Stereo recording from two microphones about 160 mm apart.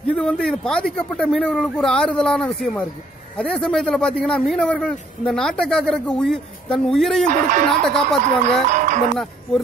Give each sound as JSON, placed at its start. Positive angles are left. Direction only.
{"t": 0.0, "sound": "a man's voice", "side_deg": 5}
{"t": 7.2, "sound": "speech", "side_deg": -50}
{"t": 7.8, "sound": "a man's voice", "side_deg": 5}
{"t": 8.6, "sound": "speech", "side_deg": -50}